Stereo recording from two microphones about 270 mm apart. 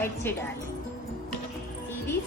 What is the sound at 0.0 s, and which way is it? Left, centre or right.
Speech, centre.